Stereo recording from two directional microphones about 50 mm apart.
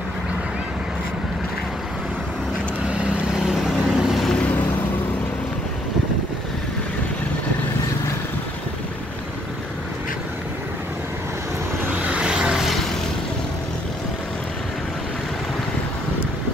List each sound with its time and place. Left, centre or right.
2.9 s vehicle: centre
3.5 s vehicle: centre
4.4 s vehicle: left
12.1 s vehicle: centre